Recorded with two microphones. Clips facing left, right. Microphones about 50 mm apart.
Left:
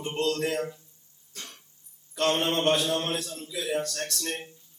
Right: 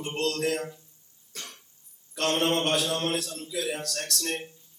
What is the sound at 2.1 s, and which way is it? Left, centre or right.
A man's voice, centre.